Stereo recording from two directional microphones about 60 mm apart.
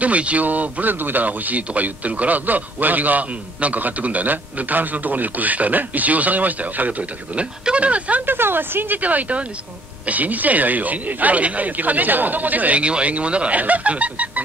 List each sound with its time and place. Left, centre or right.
0.0 s a man's voice: right
8.3 s a man's voice: right